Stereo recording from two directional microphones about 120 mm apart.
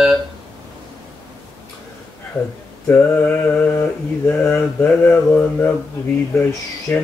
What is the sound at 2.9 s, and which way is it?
Mantra, 15° left (ahead or behind).